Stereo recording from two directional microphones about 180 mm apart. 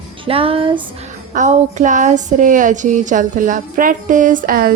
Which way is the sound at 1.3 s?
40° right (ahead or behind).